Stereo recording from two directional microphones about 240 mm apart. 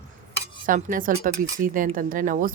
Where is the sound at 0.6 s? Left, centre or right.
Right.